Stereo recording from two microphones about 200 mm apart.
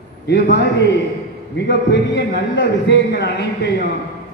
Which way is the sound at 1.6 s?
60° left (ahead or behind).